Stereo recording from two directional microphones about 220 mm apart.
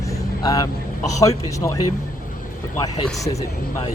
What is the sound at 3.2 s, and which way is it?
Speech, 15° left (ahead or behind).